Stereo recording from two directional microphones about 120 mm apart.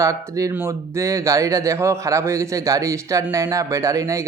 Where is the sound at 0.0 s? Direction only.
30° right (ahead or behind).